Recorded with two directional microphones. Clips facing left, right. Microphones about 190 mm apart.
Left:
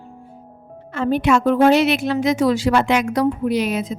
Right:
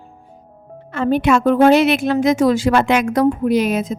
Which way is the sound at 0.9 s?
55° right (ahead or behind).